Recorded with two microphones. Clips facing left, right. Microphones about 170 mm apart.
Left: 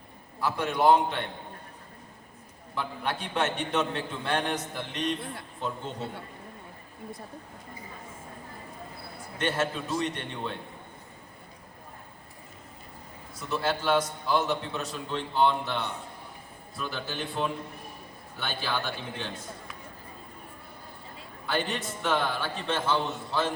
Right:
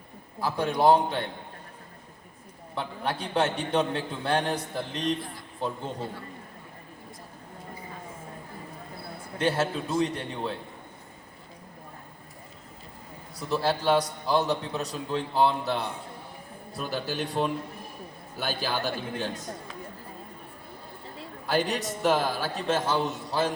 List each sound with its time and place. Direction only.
0.3 s a man's voice: 30° right (ahead or behind)
2.7 s a man's voice: 35° right (ahead or behind)
9.4 s a man's voice: 35° right (ahead or behind)
13.5 s a man's voice: 35° right (ahead or behind)
21.4 s a man's voice: 40° right (ahead or behind)